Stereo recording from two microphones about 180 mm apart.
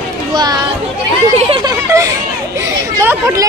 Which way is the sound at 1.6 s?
20° right (ahead or behind).